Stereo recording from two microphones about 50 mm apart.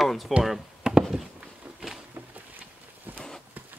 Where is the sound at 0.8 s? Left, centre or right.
Centre.